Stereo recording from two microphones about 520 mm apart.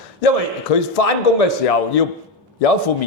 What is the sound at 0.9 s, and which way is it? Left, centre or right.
A man's voice, left.